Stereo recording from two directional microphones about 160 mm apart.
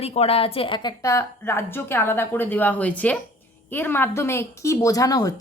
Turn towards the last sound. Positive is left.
turn(degrees=20)  # may be behind; listen again after turning